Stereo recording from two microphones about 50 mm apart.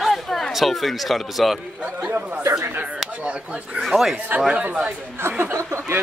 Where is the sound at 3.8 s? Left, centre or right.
Centre.